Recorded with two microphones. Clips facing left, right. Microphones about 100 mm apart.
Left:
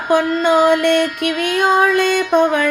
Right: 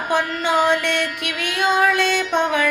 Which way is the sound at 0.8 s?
50° left (ahead or behind).